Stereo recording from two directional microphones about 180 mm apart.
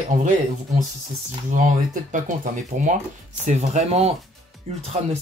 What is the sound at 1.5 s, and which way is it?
Speech, 45° right (ahead or behind).